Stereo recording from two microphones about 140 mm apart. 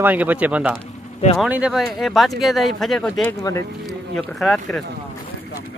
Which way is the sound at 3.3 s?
20° left (ahead or behind).